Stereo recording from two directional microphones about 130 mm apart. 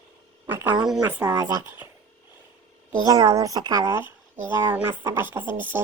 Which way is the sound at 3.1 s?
30° right (ahead or behind).